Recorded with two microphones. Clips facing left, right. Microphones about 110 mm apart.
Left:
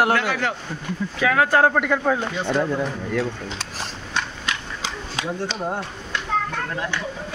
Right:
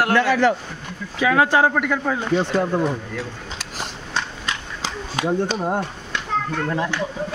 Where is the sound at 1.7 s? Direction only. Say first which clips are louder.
Left 1 dB; centre (ahead or behind).